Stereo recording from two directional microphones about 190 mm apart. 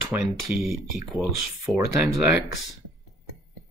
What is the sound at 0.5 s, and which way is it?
Speech, centre (ahead or behind).